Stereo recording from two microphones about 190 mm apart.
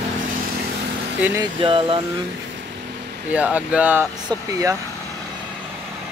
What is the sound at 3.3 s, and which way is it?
Speech, 10° right (ahead or behind).